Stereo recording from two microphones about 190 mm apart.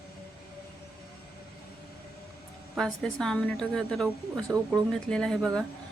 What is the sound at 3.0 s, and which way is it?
Speech, centre (ahead or behind).